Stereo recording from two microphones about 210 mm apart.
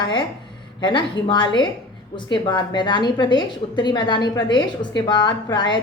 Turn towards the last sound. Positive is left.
turn(degrees=20)  # may be behind; listen again after turning